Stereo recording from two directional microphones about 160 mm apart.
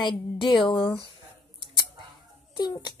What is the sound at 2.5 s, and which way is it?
Speech, 25° left (ahead or behind).